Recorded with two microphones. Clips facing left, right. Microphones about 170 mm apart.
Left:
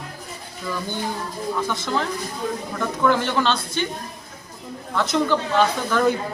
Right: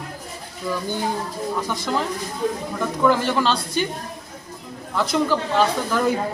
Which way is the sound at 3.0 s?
5° right (ahead or behind).